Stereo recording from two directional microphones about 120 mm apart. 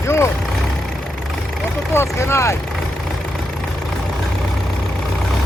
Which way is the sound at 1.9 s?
25° left (ahead or behind).